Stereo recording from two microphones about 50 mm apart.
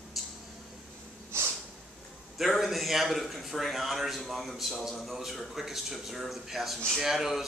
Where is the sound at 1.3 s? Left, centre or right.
Right.